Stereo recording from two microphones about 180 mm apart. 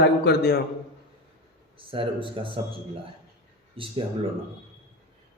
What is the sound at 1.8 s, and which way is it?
Speech, 30° right (ahead or behind).